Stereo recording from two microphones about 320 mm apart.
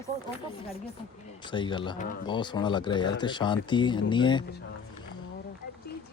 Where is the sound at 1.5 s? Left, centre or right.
Centre.